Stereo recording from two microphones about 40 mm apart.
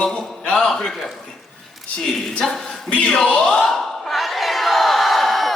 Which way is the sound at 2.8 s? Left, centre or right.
Left.